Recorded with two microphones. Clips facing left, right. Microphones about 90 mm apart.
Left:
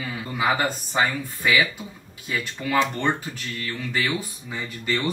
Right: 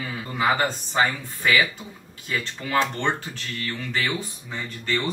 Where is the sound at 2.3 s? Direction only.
10° left (ahead or behind).